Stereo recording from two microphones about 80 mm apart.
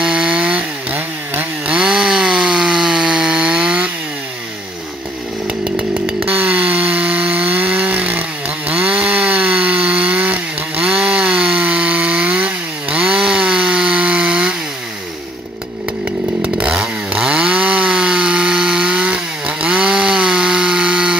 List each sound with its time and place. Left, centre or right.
0.0 s chainsaw: centre
1.8 s chainsaw: centre
6.2 s chainsaw: centre
16.5 s chainsaw: centre